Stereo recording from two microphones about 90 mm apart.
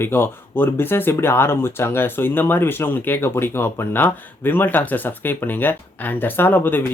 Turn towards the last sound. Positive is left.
turn(degrees=25)  # may be behind; listen again after turning